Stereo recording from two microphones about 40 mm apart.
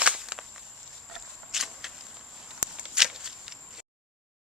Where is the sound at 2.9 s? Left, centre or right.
Centre.